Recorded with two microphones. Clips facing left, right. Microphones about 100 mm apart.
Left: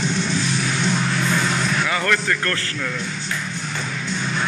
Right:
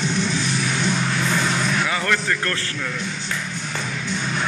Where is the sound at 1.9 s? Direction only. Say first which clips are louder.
Left 1 dB; 20° right (ahead or behind).